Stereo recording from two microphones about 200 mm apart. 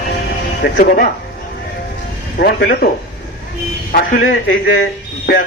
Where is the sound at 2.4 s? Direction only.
50° left (ahead or behind).